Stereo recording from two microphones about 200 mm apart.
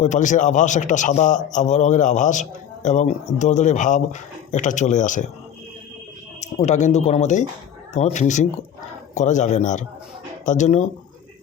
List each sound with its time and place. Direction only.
0.0 s a man's voice: 40° left (ahead or behind)
6.4 s a man's voice: 35° left (ahead or behind)